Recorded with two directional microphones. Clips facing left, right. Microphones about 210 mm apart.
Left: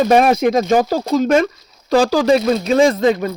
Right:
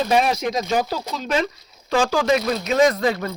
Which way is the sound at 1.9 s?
35° left (ahead or behind).